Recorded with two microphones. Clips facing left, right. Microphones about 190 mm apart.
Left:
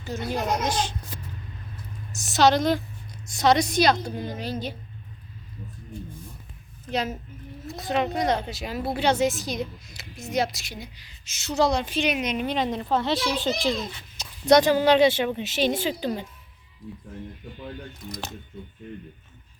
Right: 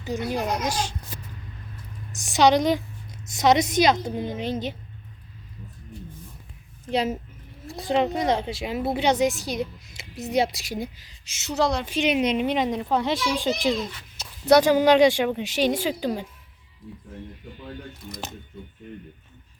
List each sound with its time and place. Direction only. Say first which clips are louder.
0.3 s speech: left 2 dB; 10° right (ahead or behind)
2.1 s a woman's voice: right 1 dB; 15° right (ahead or behind)
6.9 s a woman's voice: right 3 dB; 30° right (ahead or behind)
10.2 s a woman's voice: right 3 dB; 35° right (ahead or behind)
11.5 s a woman's voice: left 1 dB; centre (ahead or behind)
12.0 s a woman's voice: right 4 dB; 30° right (ahead or behind); by 16.2 s 10° right (ahead or behind)